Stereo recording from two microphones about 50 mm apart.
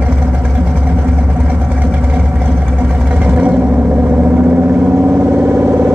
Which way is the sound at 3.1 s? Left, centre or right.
Right.